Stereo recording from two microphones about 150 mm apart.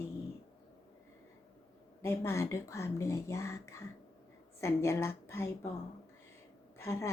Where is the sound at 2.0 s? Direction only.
15° left (ahead or behind).